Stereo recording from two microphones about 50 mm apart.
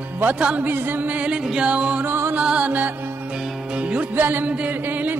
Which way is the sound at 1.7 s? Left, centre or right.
Right.